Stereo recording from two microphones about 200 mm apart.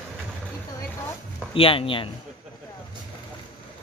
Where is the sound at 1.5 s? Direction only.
25° left (ahead or behind).